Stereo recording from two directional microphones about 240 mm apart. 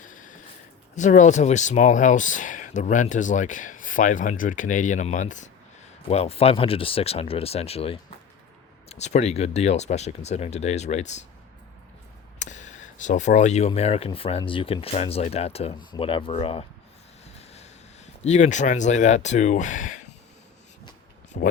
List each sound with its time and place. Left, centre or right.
0.0 s a sound: left
0.9 s speech: left
12.4 s speech: left
21.3 s speech: left